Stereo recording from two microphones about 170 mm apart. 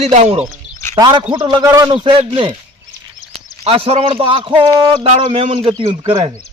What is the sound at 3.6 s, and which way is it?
A man's voice, 35° right (ahead or behind).